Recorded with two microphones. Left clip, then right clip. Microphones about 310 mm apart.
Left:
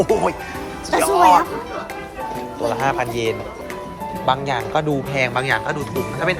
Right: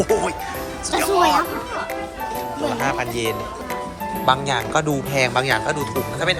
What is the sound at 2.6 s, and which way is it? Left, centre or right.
Speech, centre.